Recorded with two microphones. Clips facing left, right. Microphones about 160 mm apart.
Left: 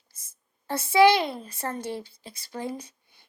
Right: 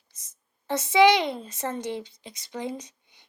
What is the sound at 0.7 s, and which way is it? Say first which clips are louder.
A woman's voice: even; 20° right (ahead or behind).